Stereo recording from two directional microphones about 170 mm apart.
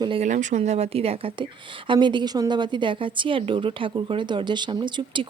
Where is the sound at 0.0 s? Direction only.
30° right (ahead or behind).